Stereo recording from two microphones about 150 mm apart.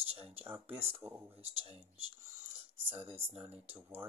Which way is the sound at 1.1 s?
15° right (ahead or behind).